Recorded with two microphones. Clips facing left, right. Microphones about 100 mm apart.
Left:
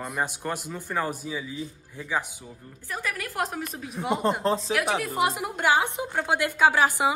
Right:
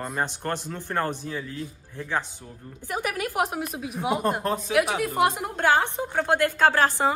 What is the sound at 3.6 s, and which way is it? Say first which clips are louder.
Speech: right 3 dB; 5° right (ahead or behind).